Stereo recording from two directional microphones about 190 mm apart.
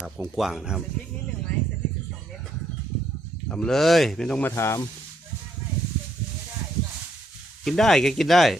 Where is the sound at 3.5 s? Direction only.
5° left (ahead or behind).